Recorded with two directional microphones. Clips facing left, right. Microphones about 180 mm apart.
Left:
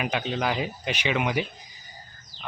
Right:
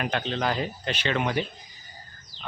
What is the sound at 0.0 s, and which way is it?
Speech, 10° left (ahead or behind).